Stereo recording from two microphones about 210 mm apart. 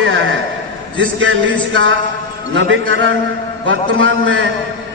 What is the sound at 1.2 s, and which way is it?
A man's voice, 65° right (ahead or behind).